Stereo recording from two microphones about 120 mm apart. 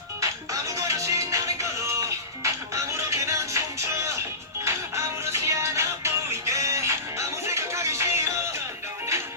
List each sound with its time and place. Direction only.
0.2 s music: 25° right (ahead or behind)